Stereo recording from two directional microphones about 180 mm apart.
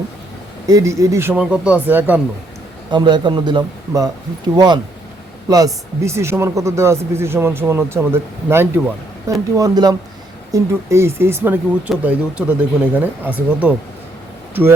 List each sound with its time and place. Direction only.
0.7 s speech: 15° right (ahead or behind)
2.9 s a man's voice: 25° right (ahead or behind); by 13.7 s 10° right (ahead or behind)